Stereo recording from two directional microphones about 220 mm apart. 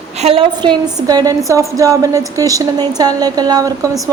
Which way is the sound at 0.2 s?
25° right (ahead or behind).